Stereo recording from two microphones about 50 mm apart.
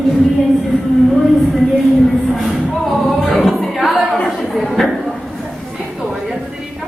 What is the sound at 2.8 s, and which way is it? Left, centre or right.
Music, centre.